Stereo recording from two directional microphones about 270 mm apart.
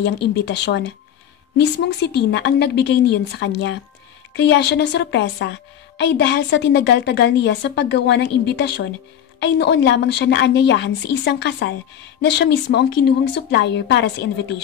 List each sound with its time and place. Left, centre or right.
0.0 s a woman's voice: left